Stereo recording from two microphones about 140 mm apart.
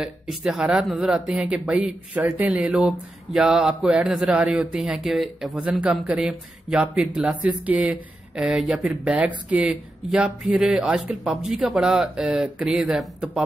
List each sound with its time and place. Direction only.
0.0 s a man's voice: 5° right (ahead or behind)